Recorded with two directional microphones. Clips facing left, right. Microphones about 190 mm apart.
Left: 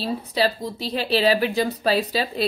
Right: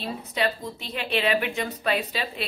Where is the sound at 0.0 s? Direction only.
30° left (ahead or behind).